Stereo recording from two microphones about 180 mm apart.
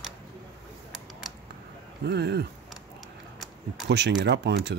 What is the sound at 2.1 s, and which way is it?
Speech, 70° right (ahead or behind).